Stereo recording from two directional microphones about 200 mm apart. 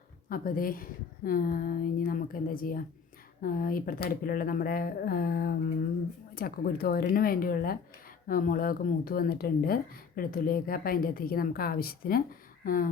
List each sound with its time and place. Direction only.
0.3 s speech: 45° left (ahead or behind)